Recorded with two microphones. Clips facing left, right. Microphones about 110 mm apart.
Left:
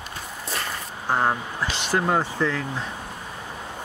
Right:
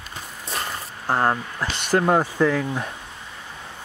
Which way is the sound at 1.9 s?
10° right (ahead or behind).